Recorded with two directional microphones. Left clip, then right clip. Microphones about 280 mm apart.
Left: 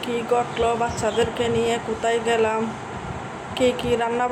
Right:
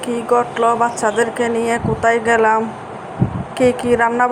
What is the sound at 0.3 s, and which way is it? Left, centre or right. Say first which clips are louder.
Speech: right 8 dB; centre.